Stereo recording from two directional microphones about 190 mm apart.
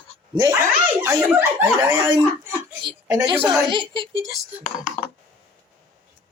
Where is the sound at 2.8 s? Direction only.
20° right (ahead or behind).